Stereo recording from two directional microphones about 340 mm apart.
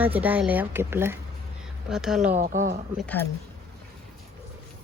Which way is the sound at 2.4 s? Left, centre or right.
Right.